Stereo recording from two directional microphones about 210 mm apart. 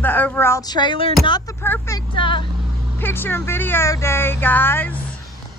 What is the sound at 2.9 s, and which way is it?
Speech, 10° left (ahead or behind).